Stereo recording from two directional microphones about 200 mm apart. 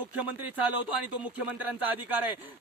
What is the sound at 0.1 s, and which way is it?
A man's voice, 5° right (ahead or behind).